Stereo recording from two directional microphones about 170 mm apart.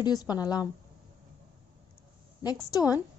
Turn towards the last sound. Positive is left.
turn(degrees=20)  # may be behind; listen again after turning